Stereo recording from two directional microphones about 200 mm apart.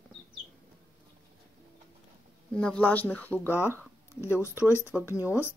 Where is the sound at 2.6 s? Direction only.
5° left (ahead or behind).